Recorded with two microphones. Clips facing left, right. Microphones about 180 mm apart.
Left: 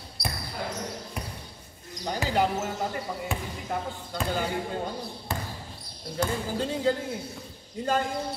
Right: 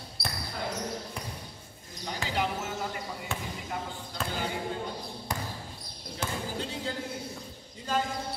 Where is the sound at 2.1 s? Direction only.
40° left (ahead or behind).